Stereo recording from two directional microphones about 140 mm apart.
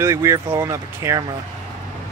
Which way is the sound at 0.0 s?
20° right (ahead or behind).